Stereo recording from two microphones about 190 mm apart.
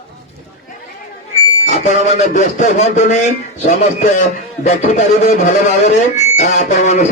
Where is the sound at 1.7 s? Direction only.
40° left (ahead or behind).